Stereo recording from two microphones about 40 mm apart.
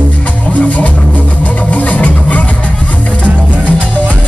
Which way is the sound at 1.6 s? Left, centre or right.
Left.